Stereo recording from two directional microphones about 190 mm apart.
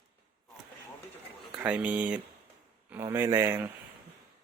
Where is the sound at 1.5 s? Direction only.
5° right (ahead or behind).